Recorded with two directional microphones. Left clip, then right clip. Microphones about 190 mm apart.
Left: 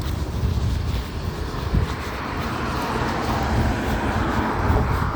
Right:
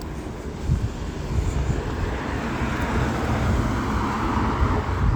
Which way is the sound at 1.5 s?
45° right (ahead or behind).